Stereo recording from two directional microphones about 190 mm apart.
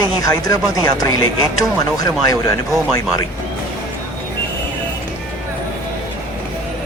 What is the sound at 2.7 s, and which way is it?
Speech, centre (ahead or behind).